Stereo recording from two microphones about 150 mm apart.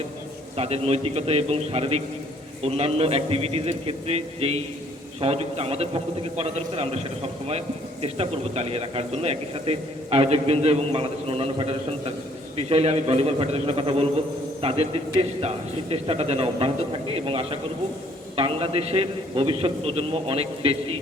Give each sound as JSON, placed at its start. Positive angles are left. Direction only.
{"t": 0.5, "sound": "a man's voice", "side_deg": -45}